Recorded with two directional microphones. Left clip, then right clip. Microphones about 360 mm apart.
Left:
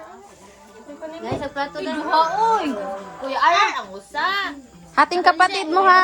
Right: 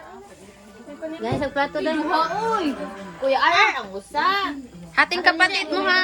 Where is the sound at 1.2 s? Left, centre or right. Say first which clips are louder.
Right 3 dB; centre.